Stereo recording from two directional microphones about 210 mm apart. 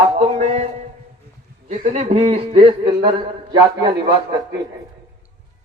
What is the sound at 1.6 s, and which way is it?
A man's voice, 35° right (ahead or behind).